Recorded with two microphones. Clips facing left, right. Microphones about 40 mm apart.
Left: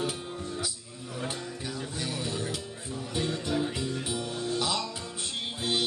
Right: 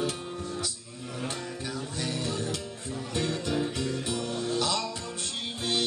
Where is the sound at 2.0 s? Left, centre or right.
Centre.